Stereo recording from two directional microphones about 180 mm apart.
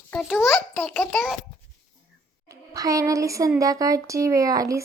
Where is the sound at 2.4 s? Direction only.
20° right (ahead or behind).